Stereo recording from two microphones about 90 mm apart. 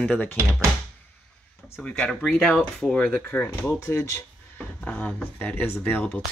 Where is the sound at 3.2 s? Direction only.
20° left (ahead or behind).